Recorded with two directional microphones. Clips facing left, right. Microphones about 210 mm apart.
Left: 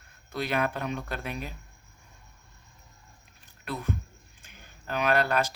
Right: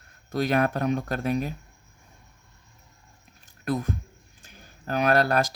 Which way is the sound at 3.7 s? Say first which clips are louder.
Right 6 dB; 40° right (ahead or behind).